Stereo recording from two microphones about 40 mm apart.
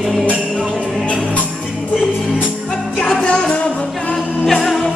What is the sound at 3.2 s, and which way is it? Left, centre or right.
Music, left.